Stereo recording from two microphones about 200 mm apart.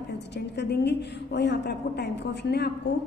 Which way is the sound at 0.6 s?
55° left (ahead or behind).